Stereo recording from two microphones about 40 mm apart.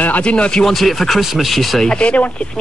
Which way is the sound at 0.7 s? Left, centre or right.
Centre.